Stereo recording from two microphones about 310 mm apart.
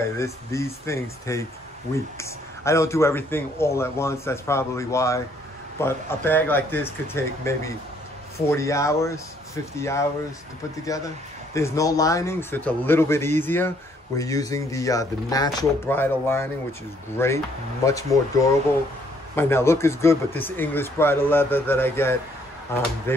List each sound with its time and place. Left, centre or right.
0.2 s a man's voice: centre
11.5 s a man's voice: centre